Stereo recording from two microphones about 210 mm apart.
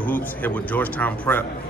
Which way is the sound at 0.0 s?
10° left (ahead or behind).